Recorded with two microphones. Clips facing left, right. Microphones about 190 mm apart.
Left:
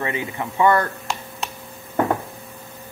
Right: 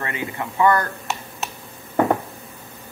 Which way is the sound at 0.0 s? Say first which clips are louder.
Left 2 dB; 20° left (ahead or behind).